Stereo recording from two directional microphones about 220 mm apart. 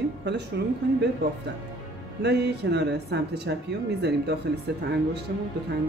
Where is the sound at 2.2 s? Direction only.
50° right (ahead or behind).